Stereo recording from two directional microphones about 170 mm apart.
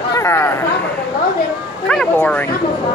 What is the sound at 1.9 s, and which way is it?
Speech, 5° left (ahead or behind).